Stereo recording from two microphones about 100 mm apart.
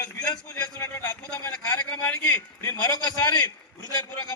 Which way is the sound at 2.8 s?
45° left (ahead or behind).